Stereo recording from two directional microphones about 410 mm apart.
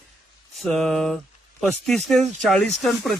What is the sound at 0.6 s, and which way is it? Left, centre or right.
Speech, centre.